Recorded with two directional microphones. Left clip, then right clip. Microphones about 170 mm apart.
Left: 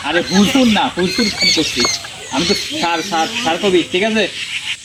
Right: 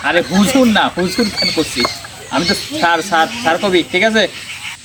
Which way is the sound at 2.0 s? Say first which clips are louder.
Left 2 dB; centre (ahead or behind).